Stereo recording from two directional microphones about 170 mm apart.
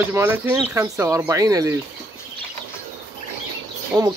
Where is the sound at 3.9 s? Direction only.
20° right (ahead or behind).